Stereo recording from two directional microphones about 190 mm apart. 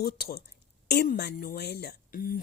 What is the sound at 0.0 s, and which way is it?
Speech, 55° left (ahead or behind).